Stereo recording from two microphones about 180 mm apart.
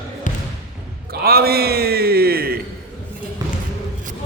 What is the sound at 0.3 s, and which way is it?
Basketball bounce, 45° left (ahead or behind).